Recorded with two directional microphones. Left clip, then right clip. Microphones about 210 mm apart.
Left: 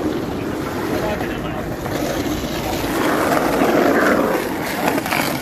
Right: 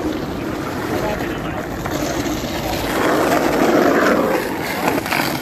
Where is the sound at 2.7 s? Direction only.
20° right (ahead or behind).